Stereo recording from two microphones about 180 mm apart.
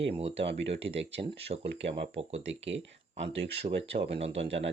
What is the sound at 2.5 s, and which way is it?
Speech, 90° right.